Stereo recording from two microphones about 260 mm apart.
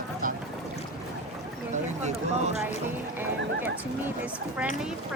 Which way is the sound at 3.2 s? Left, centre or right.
Centre.